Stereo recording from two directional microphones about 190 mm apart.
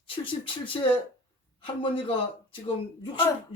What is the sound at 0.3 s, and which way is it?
Speech, 25° left (ahead or behind).